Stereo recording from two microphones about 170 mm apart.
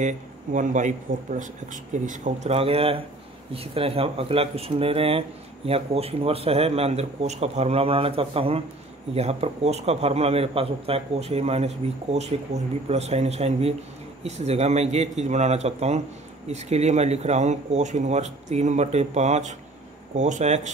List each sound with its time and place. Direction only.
0.0 s speech: 50° right (ahead or behind)